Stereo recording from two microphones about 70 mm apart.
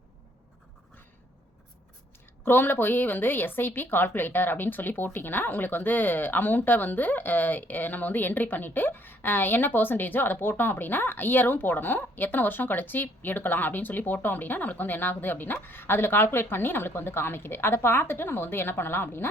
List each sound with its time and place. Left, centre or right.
2.4 s a woman's voice: left